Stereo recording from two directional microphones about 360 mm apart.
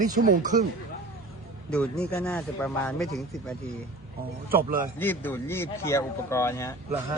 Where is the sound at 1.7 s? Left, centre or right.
Centre.